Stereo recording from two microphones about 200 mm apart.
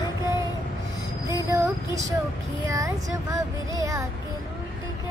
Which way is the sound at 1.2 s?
15° right (ahead or behind).